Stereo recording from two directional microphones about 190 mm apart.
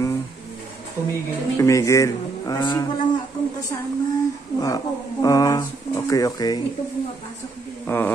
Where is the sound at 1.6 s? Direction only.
15° left (ahead or behind).